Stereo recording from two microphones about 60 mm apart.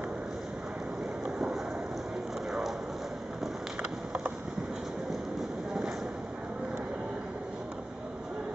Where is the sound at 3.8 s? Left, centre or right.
Centre.